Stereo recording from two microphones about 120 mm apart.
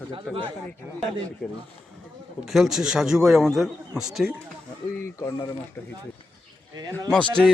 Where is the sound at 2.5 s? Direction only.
Centre (ahead or behind).